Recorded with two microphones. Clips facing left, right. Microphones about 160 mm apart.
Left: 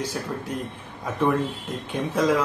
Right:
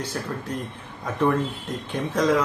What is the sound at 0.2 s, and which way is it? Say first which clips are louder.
Speech: even; 10° left (ahead or behind).